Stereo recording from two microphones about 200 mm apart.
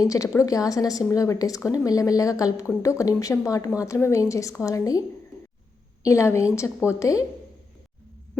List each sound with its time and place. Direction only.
0.0 s a woman's voice: 15° left (ahead or behind)